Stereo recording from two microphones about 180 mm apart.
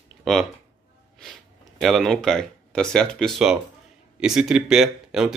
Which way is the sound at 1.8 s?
Centre (ahead or behind).